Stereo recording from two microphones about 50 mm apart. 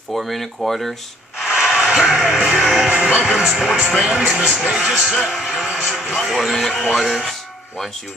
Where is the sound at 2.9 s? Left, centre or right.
Right.